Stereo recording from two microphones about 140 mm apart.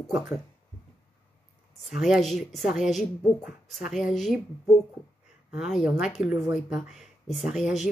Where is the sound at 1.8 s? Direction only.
Centre (ahead or behind).